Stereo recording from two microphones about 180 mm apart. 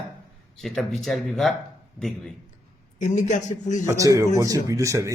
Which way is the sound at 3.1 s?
40° left (ahead or behind).